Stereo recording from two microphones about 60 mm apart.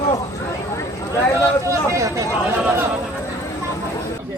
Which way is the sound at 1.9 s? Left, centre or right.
Right.